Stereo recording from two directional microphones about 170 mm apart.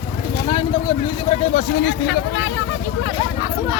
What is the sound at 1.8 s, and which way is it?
Speech, 90° left.